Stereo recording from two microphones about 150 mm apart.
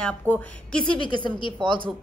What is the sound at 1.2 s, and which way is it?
Speech, 30° left (ahead or behind).